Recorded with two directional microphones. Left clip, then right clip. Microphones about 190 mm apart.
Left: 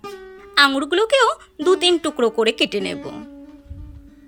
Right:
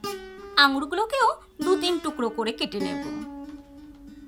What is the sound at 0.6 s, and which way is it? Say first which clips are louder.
Speech: left 5 dB; 10° left (ahead or behind).